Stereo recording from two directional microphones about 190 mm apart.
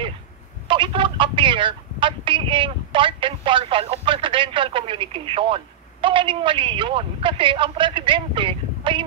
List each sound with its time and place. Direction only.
0.7 s speech: 25° right (ahead or behind)